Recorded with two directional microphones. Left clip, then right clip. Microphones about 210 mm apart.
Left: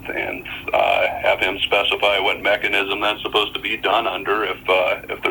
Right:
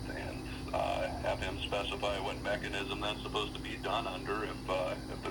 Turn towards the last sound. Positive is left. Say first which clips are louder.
# left 17 dB
turn(degrees=30)  # may be behind; listen again after turning